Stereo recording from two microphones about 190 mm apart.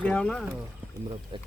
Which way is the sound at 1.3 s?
25° right (ahead or behind).